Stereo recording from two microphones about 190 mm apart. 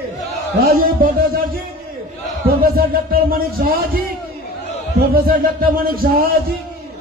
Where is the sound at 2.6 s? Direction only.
50° right (ahead or behind).